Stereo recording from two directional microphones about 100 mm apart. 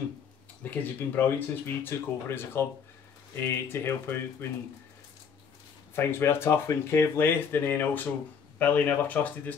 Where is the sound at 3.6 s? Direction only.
20° left (ahead or behind).